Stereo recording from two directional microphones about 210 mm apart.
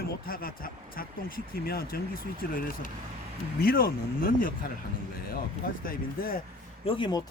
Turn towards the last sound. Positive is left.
turn(degrees=20)  # may be behind; listen again after turning